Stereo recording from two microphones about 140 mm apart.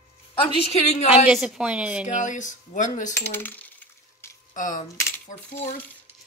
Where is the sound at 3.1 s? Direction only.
15° left (ahead or behind).